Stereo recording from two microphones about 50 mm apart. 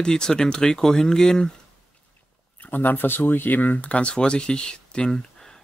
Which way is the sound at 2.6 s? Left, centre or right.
Left.